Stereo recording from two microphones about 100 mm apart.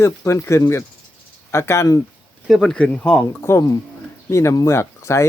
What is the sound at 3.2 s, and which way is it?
Speech, 25° left (ahead or behind).